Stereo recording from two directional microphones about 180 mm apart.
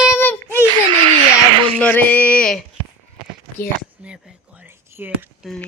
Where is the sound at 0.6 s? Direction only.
30° right (ahead or behind).